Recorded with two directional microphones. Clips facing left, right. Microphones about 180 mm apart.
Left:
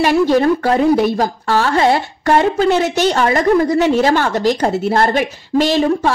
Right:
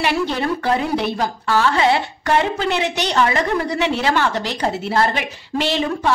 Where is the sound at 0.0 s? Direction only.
45° left (ahead or behind).